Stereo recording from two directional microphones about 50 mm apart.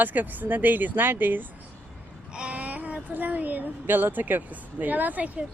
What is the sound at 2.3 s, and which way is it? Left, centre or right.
Speech, right.